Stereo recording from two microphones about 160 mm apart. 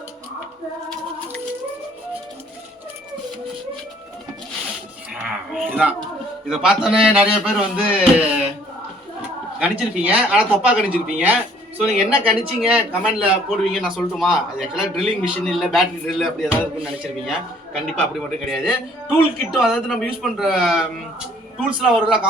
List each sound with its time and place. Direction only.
5.1 s a sound: 5° right (ahead or behind)
6.5 s a man's voice: 5° right (ahead or behind)
9.6 s a man's voice: 10° right (ahead or behind)